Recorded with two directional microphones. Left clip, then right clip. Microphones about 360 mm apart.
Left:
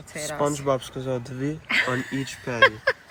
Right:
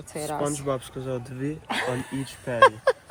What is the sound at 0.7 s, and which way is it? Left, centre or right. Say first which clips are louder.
Speech: left 4 dB; centre.